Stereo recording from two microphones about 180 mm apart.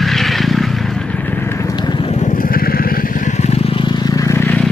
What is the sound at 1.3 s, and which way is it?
Vehicle, 15° left (ahead or behind).